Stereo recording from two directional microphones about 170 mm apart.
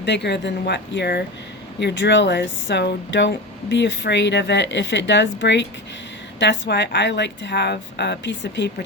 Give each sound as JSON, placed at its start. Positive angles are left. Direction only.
{"t": 0.0, "sound": "speech", "side_deg": 85}
{"t": 1.8, "sound": "speech", "side_deg": 90}